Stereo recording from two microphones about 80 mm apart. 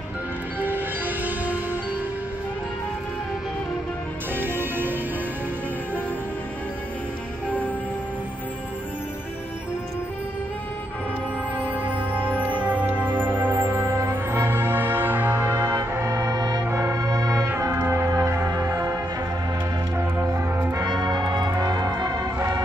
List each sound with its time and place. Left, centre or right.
0.6 s music: right
4.4 s music: right
13.2 s music: right
15.7 s brass instrument: right
16.7 s music: right
17.6 s music: right
20.2 s music: right
20.8 s music: right